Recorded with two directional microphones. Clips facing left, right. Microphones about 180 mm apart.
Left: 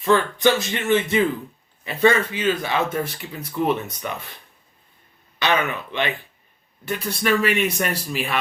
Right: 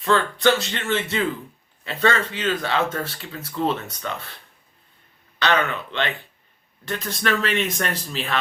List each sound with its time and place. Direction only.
0.0 s speech: 15° left (ahead or behind)
5.4 s speech: 15° left (ahead or behind)